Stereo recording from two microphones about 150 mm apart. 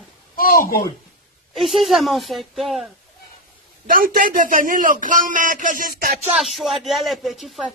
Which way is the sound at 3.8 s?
70° right (ahead or behind).